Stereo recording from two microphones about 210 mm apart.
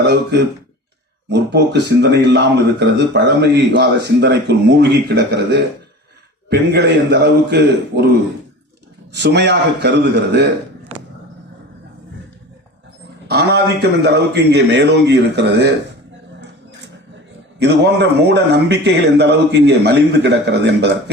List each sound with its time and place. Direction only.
0.0 s speech: 55° right (ahead or behind)
9.1 s speech: 55° right (ahead or behind)
13.2 s speech: 50° right (ahead or behind)
17.6 s speech: 55° right (ahead or behind)